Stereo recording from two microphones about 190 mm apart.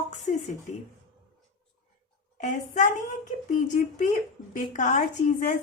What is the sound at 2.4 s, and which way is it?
A woman's voice, 40° left (ahead or behind).